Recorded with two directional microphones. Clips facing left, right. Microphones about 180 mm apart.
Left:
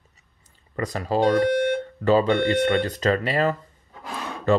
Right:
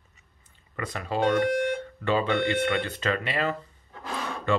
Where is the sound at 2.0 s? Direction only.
40° left (ahead or behind).